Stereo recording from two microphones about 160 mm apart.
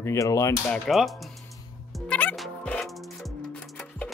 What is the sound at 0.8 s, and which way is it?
Speech, centre (ahead or behind).